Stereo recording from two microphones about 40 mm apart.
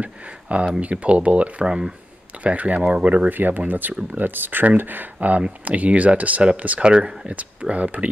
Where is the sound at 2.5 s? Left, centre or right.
Right.